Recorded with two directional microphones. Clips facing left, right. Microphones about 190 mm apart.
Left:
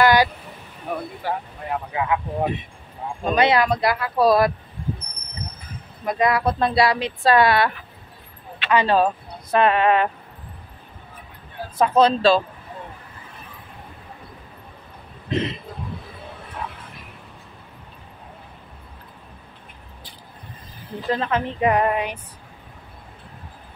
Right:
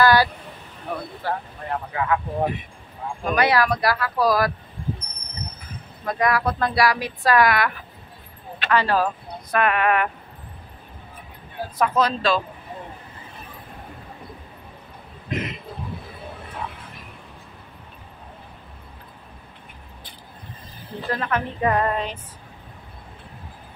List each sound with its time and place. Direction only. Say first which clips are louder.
0.0 s vehicle: left 1 dB; 20° left (ahead or behind)
0.9 s speech: left 1 dB; 15° left (ahead or behind)
6.0 s speech: left 2 dB; 25° left (ahead or behind)
11.8 s speech: left 5 dB; 30° left (ahead or behind)
15.2 s speech: left 4 dB; 30° left (ahead or behind)
21.1 s speech: left 3 dB; 20° left (ahead or behind)